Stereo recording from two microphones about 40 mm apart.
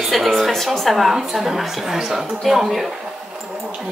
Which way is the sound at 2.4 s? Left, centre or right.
Centre.